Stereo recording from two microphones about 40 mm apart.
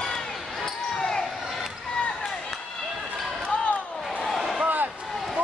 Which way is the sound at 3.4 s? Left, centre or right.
Left.